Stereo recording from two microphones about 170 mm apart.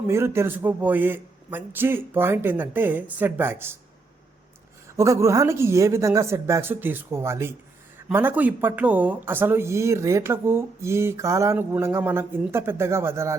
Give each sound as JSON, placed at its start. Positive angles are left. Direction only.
{"t": 0.1, "sound": "speech", "side_deg": -15}
{"t": 4.9, "sound": "speech", "side_deg": -15}